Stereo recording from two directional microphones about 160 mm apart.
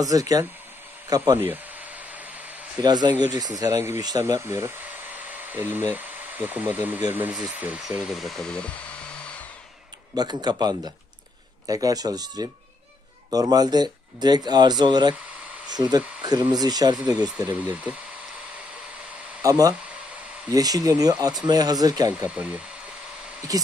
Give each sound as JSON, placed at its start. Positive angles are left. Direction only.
{"t": 0.0, "sound": "speech", "side_deg": -20}
{"t": 2.8, "sound": "speech", "side_deg": -25}
{"t": 10.1, "sound": "speech", "side_deg": -25}
{"t": 17.4, "sound": "speech", "side_deg": -10}
{"t": 19.4, "sound": "speech", "side_deg": -20}
{"t": 22.2, "sound": "speech", "side_deg": -10}
{"t": 23.5, "sound": "speech", "side_deg": -25}